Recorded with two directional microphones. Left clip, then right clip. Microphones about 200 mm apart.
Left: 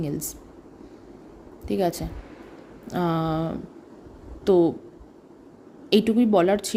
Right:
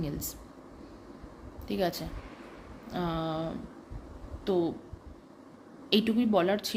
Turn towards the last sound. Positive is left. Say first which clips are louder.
# left 7 dB
turn(degrees=25)  # may be behind; listen again after turning